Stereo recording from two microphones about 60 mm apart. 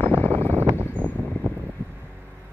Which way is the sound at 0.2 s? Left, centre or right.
Left.